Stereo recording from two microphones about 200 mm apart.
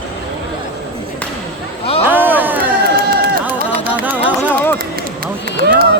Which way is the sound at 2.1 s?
10° right (ahead or behind).